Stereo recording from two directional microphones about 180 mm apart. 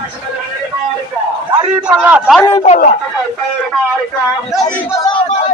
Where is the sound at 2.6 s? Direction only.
40° left (ahead or behind).